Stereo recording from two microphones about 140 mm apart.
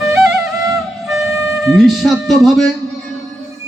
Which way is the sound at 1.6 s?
Centre (ahead or behind).